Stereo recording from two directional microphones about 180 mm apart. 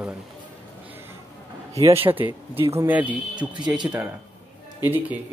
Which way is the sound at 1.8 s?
15° right (ahead or behind).